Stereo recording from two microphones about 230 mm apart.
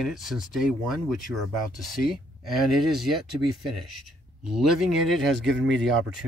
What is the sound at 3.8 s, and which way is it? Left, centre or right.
Speech, right.